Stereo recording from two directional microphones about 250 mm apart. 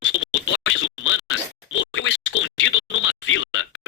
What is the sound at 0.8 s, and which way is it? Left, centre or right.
Scratch, left.